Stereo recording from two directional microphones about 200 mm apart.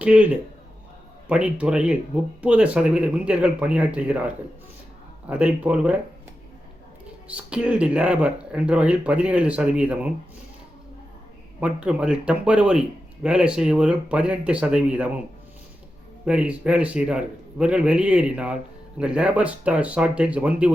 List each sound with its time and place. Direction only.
0.0 s a man's voice: 5° right (ahead or behind)
7.3 s a man's voice: 5° right (ahead or behind)
11.6 s a man's voice: 5° right (ahead or behind)
16.2 s a man's voice: 5° right (ahead or behind)